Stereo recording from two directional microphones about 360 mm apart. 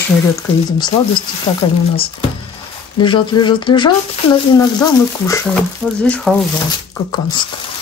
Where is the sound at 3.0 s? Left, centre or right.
Centre.